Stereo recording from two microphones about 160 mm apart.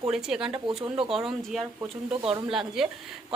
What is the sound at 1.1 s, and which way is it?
A woman's voice, centre (ahead or behind).